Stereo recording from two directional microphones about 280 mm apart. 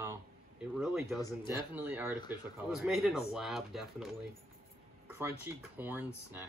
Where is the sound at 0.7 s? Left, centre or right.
Centre.